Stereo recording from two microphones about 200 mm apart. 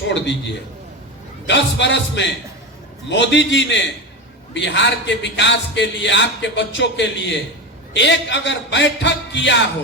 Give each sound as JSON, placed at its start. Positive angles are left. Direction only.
{"t": 0.1, "sound": "a man's voice", "side_deg": 65}